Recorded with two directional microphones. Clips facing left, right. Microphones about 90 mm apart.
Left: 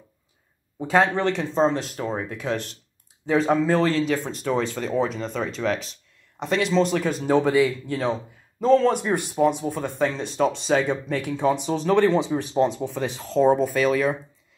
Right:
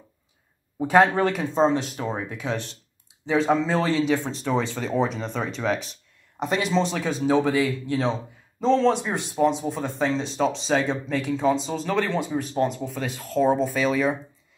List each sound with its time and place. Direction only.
0.7 s speech: 15° right (ahead or behind)
8.0 s speech: 10° left (ahead or behind)
13.6 s speech: centre (ahead or behind)